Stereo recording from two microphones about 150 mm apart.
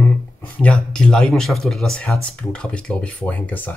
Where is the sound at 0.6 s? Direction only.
5° left (ahead or behind).